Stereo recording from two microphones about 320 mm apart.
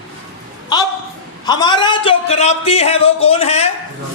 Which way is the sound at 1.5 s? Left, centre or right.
Centre.